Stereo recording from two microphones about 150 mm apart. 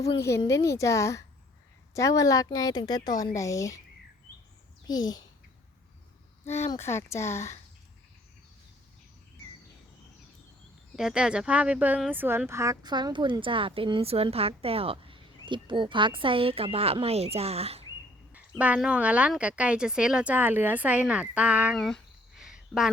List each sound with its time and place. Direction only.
0.2 s a woman's voice: 20° left (ahead or behind)
4.9 s a woman's voice: 25° left (ahead or behind)
6.5 s speech: 15° left (ahead or behind)
10.9 s speech: 5° right (ahead or behind); by 17.8 s 40° right (ahead or behind)
18.3 s speech: 10° right (ahead or behind)
21.8 s a sound: centre (ahead or behind)